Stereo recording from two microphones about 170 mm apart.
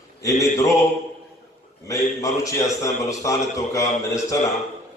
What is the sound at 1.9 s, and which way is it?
A man's voice, 20° left (ahead or behind).